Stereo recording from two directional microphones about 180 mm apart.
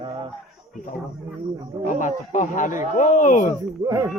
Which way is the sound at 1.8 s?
45° left (ahead or behind).